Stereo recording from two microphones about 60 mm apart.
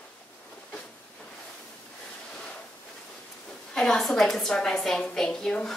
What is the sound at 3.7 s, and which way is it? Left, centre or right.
A woman's voice, centre.